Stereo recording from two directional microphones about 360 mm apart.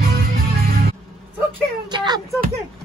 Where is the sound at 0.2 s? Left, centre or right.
Right.